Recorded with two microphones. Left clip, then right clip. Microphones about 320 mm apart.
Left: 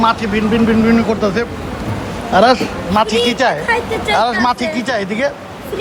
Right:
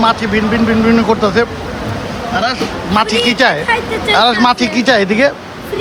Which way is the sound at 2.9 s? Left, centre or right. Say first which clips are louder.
Right 1 dB; centre.